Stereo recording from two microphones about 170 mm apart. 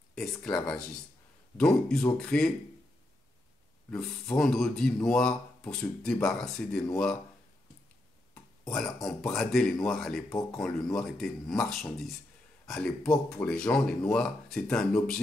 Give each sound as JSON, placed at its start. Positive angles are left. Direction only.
{"t": 0.1, "sound": "speech", "side_deg": 5}
{"t": 3.9, "sound": "speech", "side_deg": 5}
{"t": 8.6, "sound": "speech", "side_deg": 5}